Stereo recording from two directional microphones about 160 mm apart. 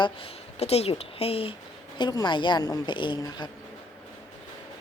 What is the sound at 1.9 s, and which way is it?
A woman's voice, 25° left (ahead or behind).